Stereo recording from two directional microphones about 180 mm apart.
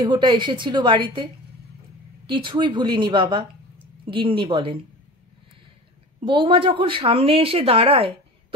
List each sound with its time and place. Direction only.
0.0 s a woman's voice: 25° right (ahead or behind)
6.2 s speech: 30° right (ahead or behind)